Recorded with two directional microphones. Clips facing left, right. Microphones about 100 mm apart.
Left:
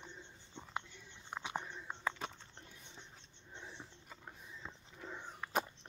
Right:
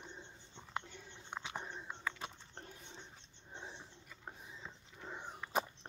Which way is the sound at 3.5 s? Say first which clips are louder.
Right 2 dB; 25° right (ahead or behind).